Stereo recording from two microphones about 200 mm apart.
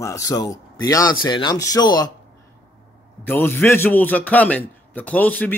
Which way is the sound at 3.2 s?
10° left (ahead or behind).